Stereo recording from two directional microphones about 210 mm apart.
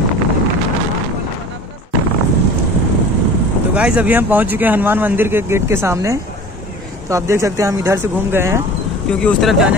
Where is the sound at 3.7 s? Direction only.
5° right (ahead or behind).